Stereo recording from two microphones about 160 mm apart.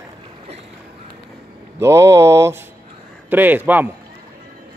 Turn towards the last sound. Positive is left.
turn(degrees=-10)  # may be behind; listen again after turning